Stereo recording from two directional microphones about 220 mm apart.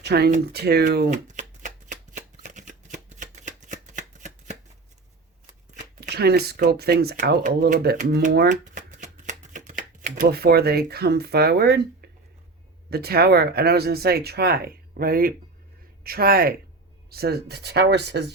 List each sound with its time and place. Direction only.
0.0 s speech: 50° right (ahead or behind)
1.1 s shuffling cards: 35° right (ahead or behind)
6.0 s speech: 45° right (ahead or behind)
12.9 s speech: 45° right (ahead or behind)